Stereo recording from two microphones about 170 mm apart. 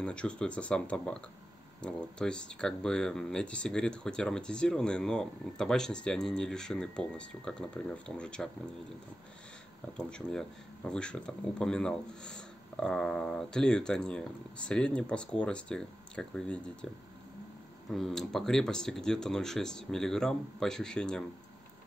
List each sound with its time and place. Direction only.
0.0 s speech: 5° left (ahead or behind)
9.9 s speech: 5° left (ahead or behind)
17.8 s speech: centre (ahead or behind)